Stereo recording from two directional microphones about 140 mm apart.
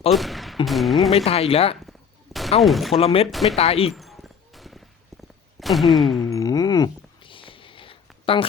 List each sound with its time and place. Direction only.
0.1 s speech: centre (ahead or behind)
1.1 s speech: 45° left (ahead or behind)
1.9 s gunshot: centre (ahead or behind)
2.6 s speech: centre (ahead or behind)
3.0 s speech: 45° left (ahead or behind)
3.2 s speech: centre (ahead or behind)
3.5 s speech: 45° left (ahead or behind)
3.9 s music: centre (ahead or behind)
5.5 s a sound: centre (ahead or behind)
6.3 s a sound: 25° left (ahead or behind)